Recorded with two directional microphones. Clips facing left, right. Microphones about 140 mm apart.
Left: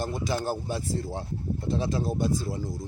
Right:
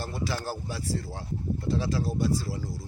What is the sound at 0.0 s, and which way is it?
Speech, 20° left (ahead or behind).